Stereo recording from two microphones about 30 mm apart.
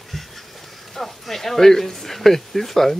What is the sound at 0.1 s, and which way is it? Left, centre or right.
Duck, centre.